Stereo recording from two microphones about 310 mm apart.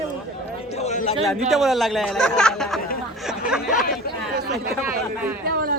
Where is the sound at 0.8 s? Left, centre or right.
Left.